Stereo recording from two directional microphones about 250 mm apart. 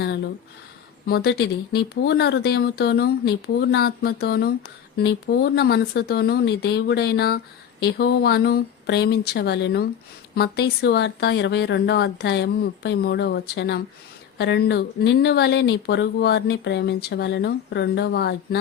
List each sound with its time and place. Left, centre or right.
1.0 s speech: left